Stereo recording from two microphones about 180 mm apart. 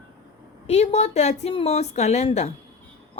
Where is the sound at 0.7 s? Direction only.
35° left (ahead or behind).